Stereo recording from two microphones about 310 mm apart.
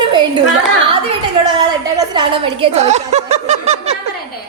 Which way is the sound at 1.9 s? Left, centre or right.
Centre.